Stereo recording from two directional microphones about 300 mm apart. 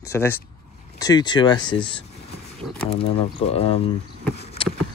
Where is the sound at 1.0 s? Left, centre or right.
Centre.